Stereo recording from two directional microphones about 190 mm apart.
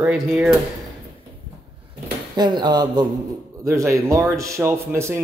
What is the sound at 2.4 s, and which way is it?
Speech, 20° right (ahead or behind).